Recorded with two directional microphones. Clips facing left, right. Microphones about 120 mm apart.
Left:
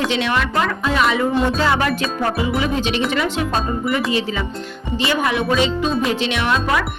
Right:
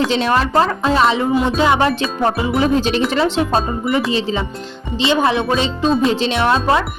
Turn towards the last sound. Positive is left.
turn(degrees=-30)  # may be behind; listen again after turning